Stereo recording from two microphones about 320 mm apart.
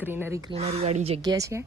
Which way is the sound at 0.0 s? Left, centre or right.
Centre.